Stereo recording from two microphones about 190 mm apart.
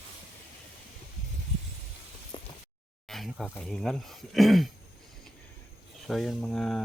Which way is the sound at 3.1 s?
Centre (ahead or behind).